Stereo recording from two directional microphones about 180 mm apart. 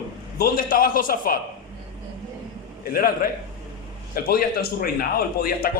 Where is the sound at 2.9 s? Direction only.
55° left (ahead or behind).